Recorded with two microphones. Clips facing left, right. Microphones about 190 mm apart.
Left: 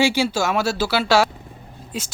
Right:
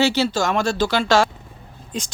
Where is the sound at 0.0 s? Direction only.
10° left (ahead or behind).